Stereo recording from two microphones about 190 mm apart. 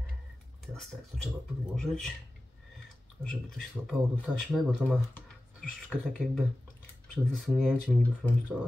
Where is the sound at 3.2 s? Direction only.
5° left (ahead or behind).